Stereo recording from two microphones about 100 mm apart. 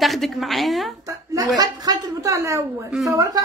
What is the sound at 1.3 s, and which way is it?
A woman's voice, 40° right (ahead or behind).